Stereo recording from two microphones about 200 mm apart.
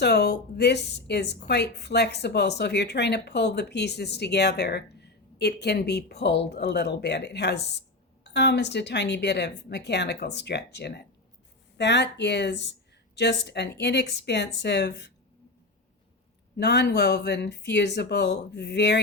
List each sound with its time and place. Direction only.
0.0 s a woman's voice: 55° left (ahead or behind)
16.6 s a woman's voice: 60° left (ahead or behind)